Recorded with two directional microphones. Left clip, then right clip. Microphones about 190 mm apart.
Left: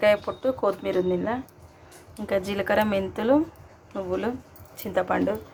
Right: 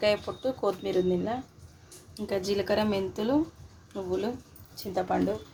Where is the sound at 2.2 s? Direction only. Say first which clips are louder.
Left 3 dB; 5° left (ahead or behind).